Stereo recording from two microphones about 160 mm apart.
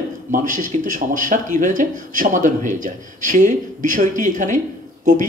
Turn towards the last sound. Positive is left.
turn(degrees=-50)  # may be behind; listen again after turning